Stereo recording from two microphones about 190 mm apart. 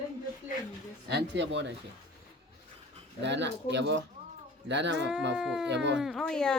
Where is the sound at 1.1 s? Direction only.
70° right (ahead or behind).